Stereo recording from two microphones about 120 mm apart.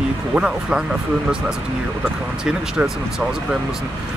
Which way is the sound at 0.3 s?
5° right (ahead or behind).